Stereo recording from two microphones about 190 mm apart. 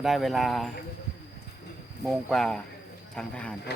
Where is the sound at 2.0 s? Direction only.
Centre (ahead or behind).